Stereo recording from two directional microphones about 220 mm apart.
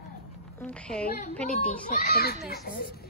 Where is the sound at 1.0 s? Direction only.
35° left (ahead or behind).